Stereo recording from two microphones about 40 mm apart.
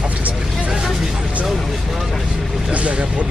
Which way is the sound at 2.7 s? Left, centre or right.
Right.